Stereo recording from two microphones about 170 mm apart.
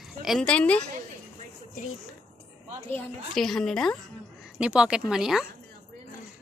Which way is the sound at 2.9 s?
5° left (ahead or behind).